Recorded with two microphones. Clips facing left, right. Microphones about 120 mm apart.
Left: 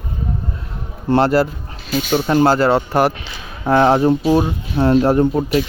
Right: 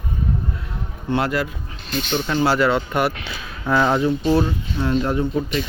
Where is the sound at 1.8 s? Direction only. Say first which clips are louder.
Left 6 dB; 5° left (ahead or behind).